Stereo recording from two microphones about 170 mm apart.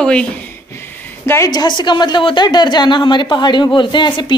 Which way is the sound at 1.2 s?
15° left (ahead or behind).